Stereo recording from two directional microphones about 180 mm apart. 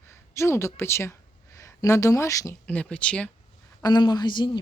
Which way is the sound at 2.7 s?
5° left (ahead or behind).